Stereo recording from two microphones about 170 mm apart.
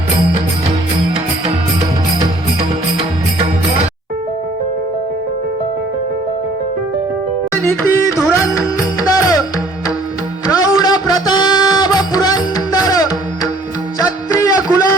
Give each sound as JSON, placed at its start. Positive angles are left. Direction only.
{"t": 3.3, "sound": "music", "side_deg": -35}
{"t": 7.5, "sound": "music", "side_deg": 15}
{"t": 10.4, "sound": "music", "side_deg": 20}
{"t": 14.3, "sound": "a sound", "side_deg": 20}